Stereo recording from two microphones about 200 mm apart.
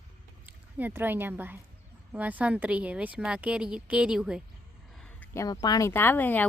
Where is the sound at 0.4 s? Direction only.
10° right (ahead or behind).